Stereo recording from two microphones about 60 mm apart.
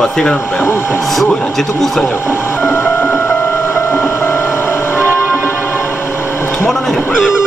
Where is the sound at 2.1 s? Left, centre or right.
Left.